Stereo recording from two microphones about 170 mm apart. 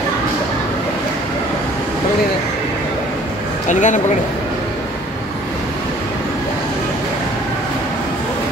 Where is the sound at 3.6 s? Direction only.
45° left (ahead or behind).